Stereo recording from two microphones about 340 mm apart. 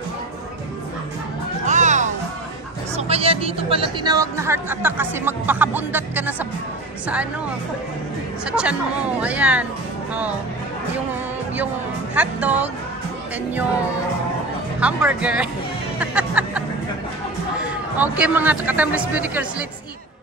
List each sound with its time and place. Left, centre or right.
1.7 s music: right
3.0 s speech: centre
8.5 s speech: centre
11.5 s speech: centre
14.8 s speech: centre
16.0 s music: centre
17.6 s speech: centre